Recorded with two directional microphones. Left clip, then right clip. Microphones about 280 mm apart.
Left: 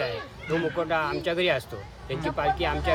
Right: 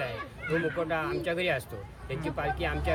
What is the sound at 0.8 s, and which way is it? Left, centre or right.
Speech, centre.